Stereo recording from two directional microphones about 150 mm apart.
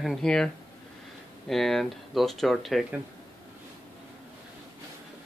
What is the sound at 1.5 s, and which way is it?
Speech, centre (ahead or behind).